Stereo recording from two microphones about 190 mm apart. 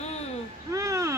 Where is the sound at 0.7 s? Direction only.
15° right (ahead or behind).